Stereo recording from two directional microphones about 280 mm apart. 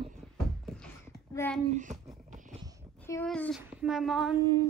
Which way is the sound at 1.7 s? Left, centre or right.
Right.